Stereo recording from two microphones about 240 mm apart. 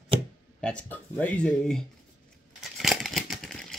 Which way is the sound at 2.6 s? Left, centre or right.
Centre.